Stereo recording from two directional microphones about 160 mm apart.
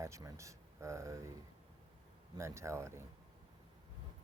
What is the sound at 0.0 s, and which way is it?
Speech, 20° right (ahead or behind).